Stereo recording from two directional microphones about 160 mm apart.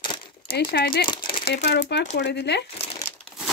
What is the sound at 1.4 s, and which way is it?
Speech, 90° left.